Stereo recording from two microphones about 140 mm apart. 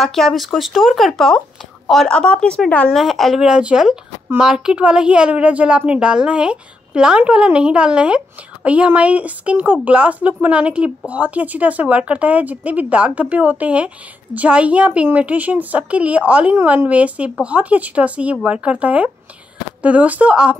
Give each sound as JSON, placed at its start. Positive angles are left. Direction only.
{"t": 0.0, "sound": "speech", "side_deg": 0}